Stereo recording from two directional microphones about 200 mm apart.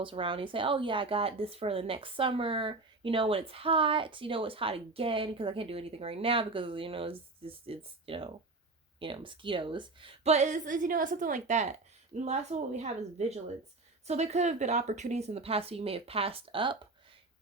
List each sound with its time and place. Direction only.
0.0 s a woman's voice: 25° right (ahead or behind)